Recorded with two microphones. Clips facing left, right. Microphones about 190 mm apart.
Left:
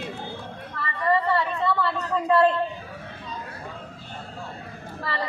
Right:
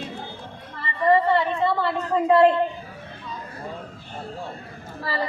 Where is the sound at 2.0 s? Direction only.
25° right (ahead or behind).